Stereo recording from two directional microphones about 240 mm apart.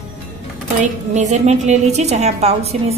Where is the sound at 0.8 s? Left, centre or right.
Right.